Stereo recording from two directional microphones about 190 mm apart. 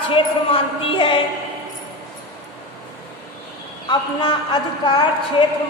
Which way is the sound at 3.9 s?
25° left (ahead or behind).